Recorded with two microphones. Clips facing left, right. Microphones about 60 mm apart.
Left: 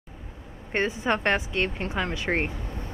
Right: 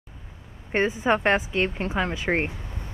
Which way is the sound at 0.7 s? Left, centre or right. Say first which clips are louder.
Right 3 dB; centre.